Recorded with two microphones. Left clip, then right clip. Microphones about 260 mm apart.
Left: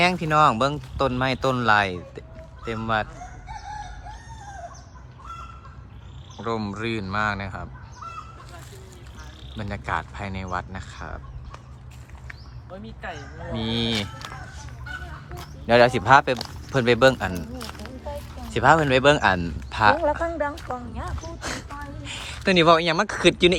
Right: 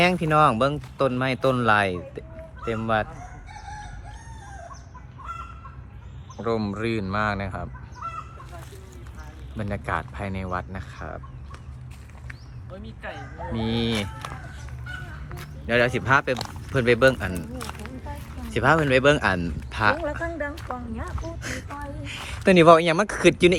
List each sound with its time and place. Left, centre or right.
0.0 s speech: centre
6.3 s speech: centre
9.6 s speech: centre
12.7 s speech: left
13.5 s speech: centre
15.6 s speech: centre